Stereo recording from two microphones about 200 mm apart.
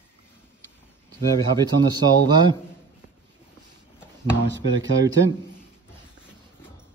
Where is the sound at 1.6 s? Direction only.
20° right (ahead or behind).